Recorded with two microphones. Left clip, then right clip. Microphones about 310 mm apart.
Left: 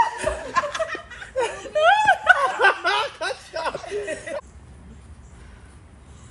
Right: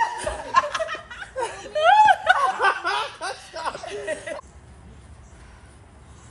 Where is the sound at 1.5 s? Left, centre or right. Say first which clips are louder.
Right 2 dB; centre.